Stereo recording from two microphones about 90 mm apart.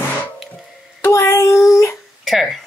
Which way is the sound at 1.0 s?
30° left (ahead or behind).